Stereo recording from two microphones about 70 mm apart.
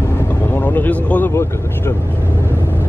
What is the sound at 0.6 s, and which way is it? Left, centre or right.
Speech, left.